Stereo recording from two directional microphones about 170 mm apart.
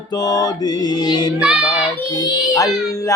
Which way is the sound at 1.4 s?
5° right (ahead or behind).